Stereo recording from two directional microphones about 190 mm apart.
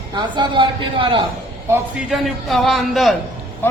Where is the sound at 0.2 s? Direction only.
25° right (ahead or behind).